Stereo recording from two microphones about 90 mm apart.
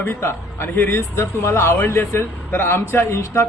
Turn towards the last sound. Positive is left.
turn(degrees=30)  # may be behind; listen again after turning